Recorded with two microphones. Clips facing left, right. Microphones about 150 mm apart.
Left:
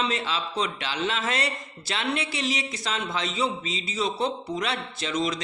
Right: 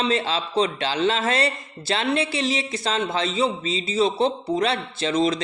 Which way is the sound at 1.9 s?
30° right (ahead or behind).